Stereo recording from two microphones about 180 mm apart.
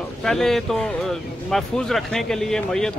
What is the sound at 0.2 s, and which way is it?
A man's voice, centre (ahead or behind).